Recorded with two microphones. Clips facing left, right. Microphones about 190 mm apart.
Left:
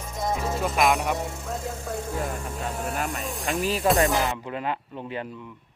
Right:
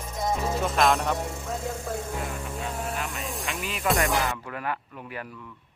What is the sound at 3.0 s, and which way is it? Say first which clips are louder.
Speech: left 4 dB; 45° left (ahead or behind).